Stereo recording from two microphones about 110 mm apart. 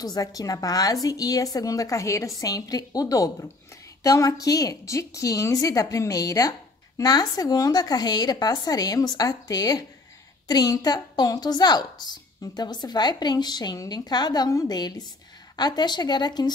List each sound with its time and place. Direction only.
0.0 s a woman's voice: 35° left (ahead or behind)